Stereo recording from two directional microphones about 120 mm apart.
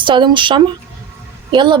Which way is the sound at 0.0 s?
40° right (ahead or behind).